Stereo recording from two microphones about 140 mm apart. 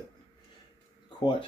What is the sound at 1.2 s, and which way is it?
Speech, 35° left (ahead or behind).